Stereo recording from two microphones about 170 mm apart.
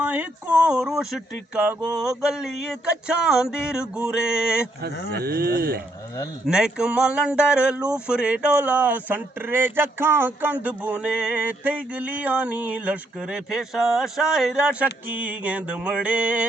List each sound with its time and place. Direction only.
0.0 s speech: 10° right (ahead or behind)
2.0 s music: 5° right (ahead or behind)
5.1 s speech: 65° right (ahead or behind)
6.4 s speech: 5° right (ahead or behind)